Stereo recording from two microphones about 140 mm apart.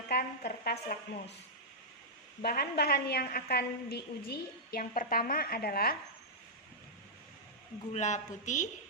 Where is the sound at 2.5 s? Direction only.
90° left.